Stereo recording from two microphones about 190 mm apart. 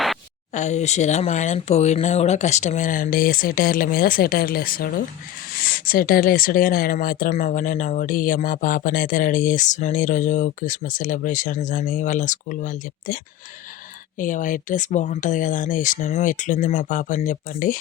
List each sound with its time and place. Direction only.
0.5 s speech: 35° left (ahead or behind)
14.2 s speech: 45° left (ahead or behind)